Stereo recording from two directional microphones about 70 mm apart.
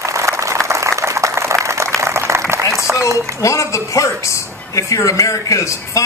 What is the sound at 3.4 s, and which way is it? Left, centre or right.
A man's voice, left.